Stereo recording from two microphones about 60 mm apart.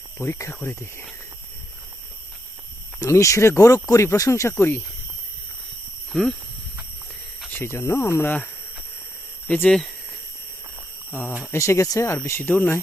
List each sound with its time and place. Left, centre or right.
0.2 s speech: left
0.5 s speech: left
3.0 s speech: left
4.5 s speech: left
6.1 s speech: centre
7.6 s speech: left
9.6 s speech: centre
11.5 s speech: left
12.2 s speech: left